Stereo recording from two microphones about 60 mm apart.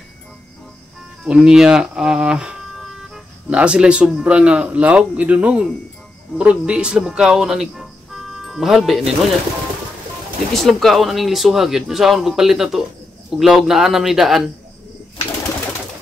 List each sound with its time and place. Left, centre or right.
1.2 s a man's voice: centre
10.5 s speech: centre